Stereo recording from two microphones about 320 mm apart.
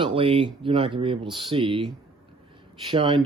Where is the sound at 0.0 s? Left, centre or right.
Centre.